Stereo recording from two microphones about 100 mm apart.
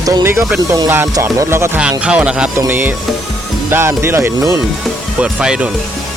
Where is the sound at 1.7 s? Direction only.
10° right (ahead or behind).